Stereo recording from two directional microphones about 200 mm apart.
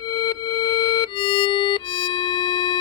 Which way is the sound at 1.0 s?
25° left (ahead or behind).